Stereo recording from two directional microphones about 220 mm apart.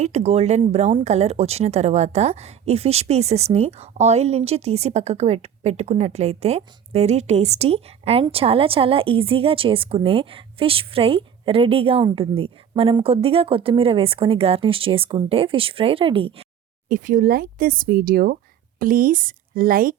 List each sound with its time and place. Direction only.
0.0 s speech: 30° right (ahead or behind)
16.9 s speech: 35° right (ahead or behind)